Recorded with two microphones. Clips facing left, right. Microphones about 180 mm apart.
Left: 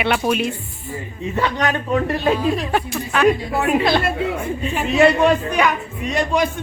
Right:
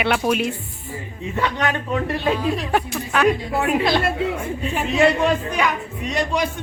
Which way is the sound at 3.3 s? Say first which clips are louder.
Left 4 dB; 50° left (ahead or behind).